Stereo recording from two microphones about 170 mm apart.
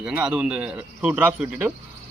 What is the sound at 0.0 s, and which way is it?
A man's voice, 5° right (ahead or behind).